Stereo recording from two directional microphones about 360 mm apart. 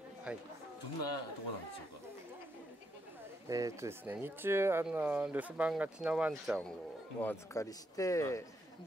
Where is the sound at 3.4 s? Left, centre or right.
Centre.